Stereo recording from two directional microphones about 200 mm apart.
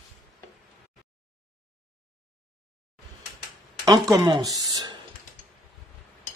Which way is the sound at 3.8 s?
20° right (ahead or behind).